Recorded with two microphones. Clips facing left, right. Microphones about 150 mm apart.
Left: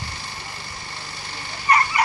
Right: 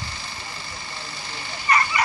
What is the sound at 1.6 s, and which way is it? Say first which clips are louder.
Dog: left 2 dB; 40° left (ahead or behind).